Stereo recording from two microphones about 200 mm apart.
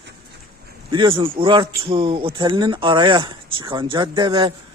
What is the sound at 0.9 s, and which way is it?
Speech, 25° right (ahead or behind).